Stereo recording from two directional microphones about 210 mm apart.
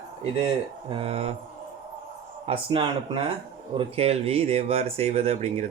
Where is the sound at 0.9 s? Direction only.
25° right (ahead or behind).